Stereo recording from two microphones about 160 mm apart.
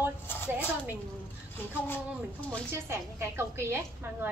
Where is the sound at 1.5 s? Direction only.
10° left (ahead or behind).